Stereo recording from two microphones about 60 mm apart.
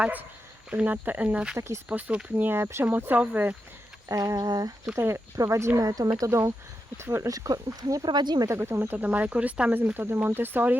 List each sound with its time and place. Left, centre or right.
0.0 s speech: right
1.5 s speech: right
1.9 s speech: right
2.4 s speech: right
4.1 s speech: right
4.9 s speech: right
5.4 s speech: right
6.9 s speech: right
7.3 s speech: right
8.5 s speech: right